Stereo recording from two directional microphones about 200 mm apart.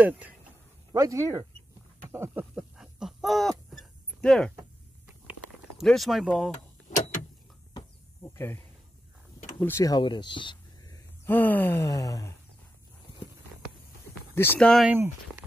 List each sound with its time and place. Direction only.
0.9 s speech: 15° right (ahead or behind)
2.0 s a sound: 10° right (ahead or behind); by 4.6 s 5° left (ahead or behind)
5.8 s speech: centre (ahead or behind)
8.2 s speech: 10° left (ahead or behind)
9.6 s speech: 10° left (ahead or behind)
11.2 s speech: 10° left (ahead or behind)
14.3 s speech: 10° left (ahead or behind)